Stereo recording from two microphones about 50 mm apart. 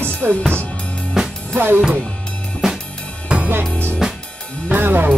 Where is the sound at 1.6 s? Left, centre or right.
Right.